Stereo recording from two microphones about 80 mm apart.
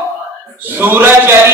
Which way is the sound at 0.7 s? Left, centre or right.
Right.